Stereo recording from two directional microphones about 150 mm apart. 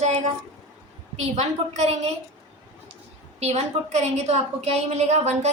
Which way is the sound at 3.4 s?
45° right (ahead or behind).